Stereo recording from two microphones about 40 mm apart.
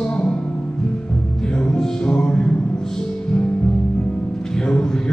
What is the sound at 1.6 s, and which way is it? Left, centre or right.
Music, left.